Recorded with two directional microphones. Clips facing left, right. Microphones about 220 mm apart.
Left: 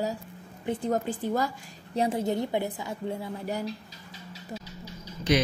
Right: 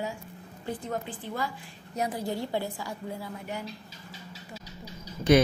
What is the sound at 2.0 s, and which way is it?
A woman's voice, 25° left (ahead or behind).